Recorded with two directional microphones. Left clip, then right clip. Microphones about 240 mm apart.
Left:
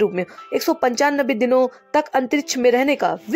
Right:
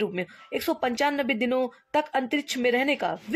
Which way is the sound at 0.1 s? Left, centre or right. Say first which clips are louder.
Left 8 dB; centre.